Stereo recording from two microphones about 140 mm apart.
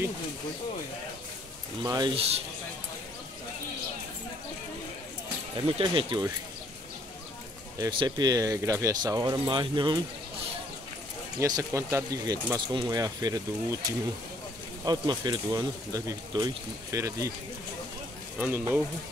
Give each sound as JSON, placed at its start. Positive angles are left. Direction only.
{"t": 1.8, "sound": "speech", "side_deg": -30}
{"t": 2.1, "sound": "a man's voice", "side_deg": -45}
{"t": 5.7, "sound": "speech", "side_deg": -35}
{"t": 8.0, "sound": "speech", "side_deg": -30}
{"t": 11.3, "sound": "speech", "side_deg": -25}
{"t": 14.9, "sound": "speech", "side_deg": -30}
{"t": 18.4, "sound": "speech", "side_deg": -15}